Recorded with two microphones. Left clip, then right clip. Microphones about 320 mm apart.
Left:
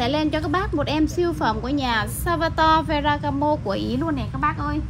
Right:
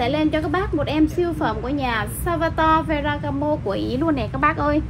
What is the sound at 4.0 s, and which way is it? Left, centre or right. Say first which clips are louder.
Speech: right 4 dB; centre.